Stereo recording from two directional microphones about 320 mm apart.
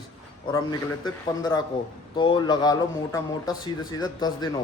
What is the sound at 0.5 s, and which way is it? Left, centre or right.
Speech, centre.